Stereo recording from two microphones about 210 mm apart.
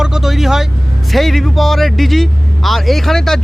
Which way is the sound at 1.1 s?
Centre (ahead or behind).